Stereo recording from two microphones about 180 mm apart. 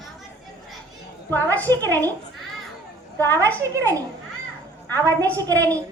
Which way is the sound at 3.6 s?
20° right (ahead or behind).